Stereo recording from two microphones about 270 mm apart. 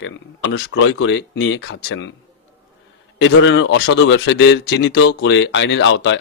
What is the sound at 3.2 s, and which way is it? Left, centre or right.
Speech, left.